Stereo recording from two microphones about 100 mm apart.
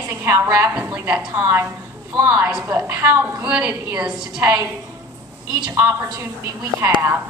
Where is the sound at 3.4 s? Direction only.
15° right (ahead or behind).